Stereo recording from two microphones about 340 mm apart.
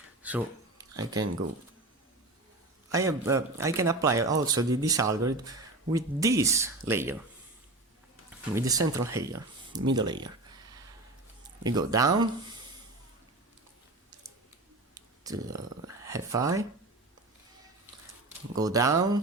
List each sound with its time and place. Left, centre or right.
0.2 s a sound: centre
2.9 s speech: centre
8.5 s speech: centre
9.9 s a sound: centre
11.6 s speech: centre
14.9 s speech: centre
18.5 s speech: centre